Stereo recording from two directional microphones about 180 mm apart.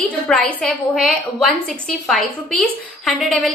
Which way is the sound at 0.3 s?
5° left (ahead or behind).